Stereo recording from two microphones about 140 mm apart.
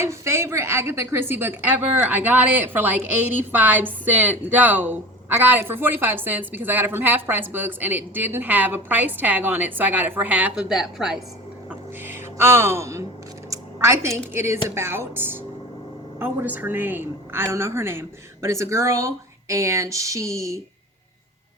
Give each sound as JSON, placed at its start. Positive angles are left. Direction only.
{"t": 0.0, "sound": "a woman's voice", "side_deg": -20}
{"t": 11.7, "sound": "a sound", "side_deg": -15}
{"t": 13.5, "sound": "a woman's voice", "side_deg": -20}